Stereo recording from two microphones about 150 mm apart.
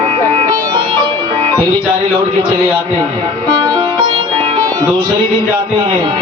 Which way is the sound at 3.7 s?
30° right (ahead or behind).